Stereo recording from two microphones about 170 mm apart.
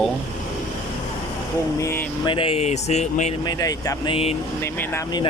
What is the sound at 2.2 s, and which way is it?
Speech, 30° left (ahead or behind).